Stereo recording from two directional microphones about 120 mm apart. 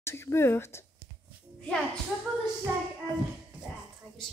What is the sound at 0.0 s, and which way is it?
Speech, 20° left (ahead or behind).